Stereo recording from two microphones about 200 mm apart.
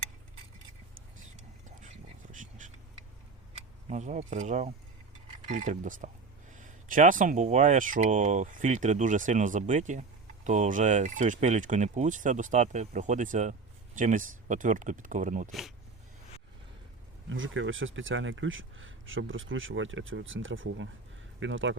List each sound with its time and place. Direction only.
2.3 s a sound: 40° right (ahead or behind)
3.8 s speech: 35° right (ahead or behind)
17.2 s speech: 70° right (ahead or behind)